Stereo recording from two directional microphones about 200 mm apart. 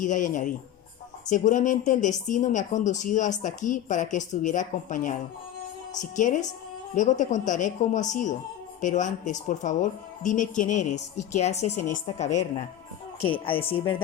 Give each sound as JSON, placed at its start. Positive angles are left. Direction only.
{"t": 0.0, "sound": "speech", "side_deg": 40}